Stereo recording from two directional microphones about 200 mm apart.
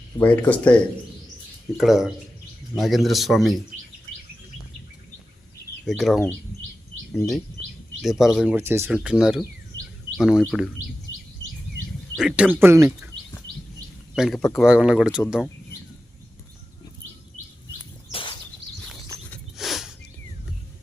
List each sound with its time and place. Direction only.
0.2 s speech: 10° left (ahead or behind)
1.8 s speech: centre (ahead or behind)
5.8 s speech: centre (ahead or behind)
12.1 s speech: 5° right (ahead or behind)
14.2 s speech: centre (ahead or behind)
18.1 s a sound: 25° left (ahead or behind)
19.3 s a sound: centre (ahead or behind)